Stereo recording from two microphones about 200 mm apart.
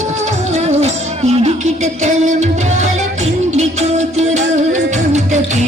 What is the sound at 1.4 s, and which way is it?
Music, 35° right (ahead or behind).